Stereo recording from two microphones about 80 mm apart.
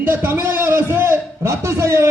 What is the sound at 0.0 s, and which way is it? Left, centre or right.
A man's voice, right.